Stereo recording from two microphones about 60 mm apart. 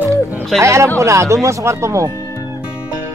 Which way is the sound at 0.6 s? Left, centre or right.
Right.